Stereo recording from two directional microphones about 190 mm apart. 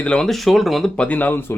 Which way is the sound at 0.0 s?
5° left (ahead or behind).